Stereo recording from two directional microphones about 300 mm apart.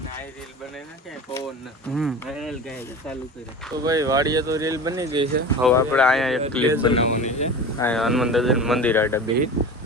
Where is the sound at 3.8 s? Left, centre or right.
Centre.